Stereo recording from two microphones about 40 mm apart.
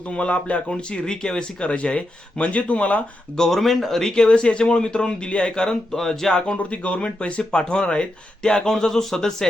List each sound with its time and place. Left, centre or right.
0.1 s speech: left
0.7 s speech: centre; by 3.0 s left
3.3 s speech: centre
3.6 s speech: centre
4.1 s speech: left
6.6 s speech: left; by 9.5 s centre